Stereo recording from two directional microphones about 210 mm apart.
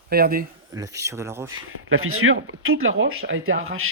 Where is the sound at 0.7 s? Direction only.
15° right (ahead or behind).